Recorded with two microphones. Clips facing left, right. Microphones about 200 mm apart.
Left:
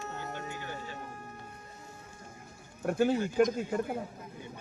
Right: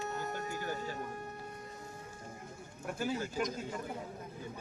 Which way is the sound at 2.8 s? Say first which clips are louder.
Left 9 dB; 55° left (ahead or behind).